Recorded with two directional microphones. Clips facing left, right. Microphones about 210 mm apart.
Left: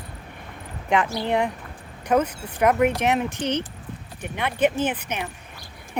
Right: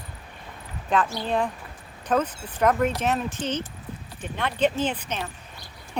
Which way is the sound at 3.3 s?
65° left (ahead or behind).